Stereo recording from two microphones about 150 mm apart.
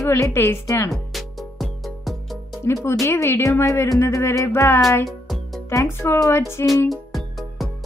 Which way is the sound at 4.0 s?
15° left (ahead or behind).